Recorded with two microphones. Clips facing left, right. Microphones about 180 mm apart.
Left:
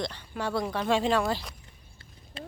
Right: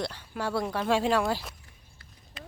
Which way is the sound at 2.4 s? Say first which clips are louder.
Left 5 dB; 30° left (ahead or behind).